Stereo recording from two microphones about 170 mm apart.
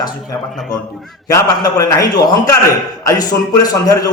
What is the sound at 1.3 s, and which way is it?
A man's voice, 20° left (ahead or behind).